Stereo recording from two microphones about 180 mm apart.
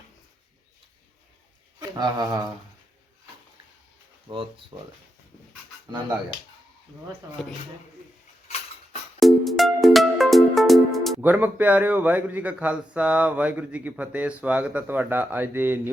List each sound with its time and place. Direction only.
2.0 s speech: 25° right (ahead or behind)
4.7 s speech: 30° right (ahead or behind)
9.2 s music: centre (ahead or behind)
11.2 s a man's voice: 10° right (ahead or behind)